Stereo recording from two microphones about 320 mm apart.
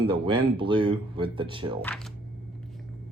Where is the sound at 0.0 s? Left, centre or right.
Centre.